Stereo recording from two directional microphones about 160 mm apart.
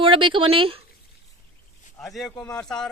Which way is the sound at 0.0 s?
30° right (ahead or behind).